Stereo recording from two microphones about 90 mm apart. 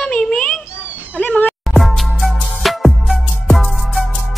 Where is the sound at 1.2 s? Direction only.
15° left (ahead or behind).